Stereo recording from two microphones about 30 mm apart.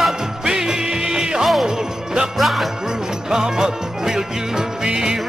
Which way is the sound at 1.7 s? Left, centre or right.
Centre.